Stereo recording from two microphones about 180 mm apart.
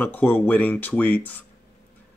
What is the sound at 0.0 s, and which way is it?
Speech, 10° left (ahead or behind).